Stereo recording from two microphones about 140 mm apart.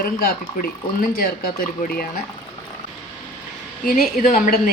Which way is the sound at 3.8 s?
85° left.